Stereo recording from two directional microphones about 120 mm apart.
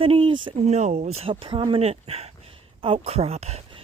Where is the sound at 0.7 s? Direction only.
65° right (ahead or behind).